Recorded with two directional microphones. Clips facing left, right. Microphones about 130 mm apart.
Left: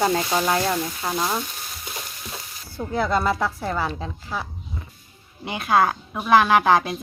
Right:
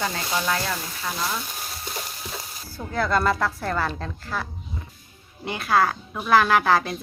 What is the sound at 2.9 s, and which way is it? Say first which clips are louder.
A woman's voice: even; 20° left (ahead or behind).